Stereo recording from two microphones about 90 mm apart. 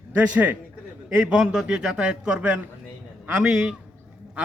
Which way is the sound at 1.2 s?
5° right (ahead or behind).